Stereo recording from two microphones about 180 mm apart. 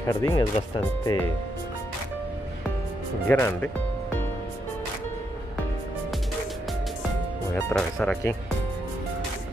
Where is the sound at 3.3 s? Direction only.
15° left (ahead or behind).